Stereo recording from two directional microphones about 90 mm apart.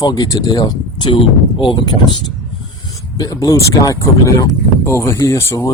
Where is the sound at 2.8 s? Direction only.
40° left (ahead or behind).